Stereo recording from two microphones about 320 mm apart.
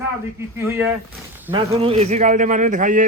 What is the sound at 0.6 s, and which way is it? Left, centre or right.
Speech, centre.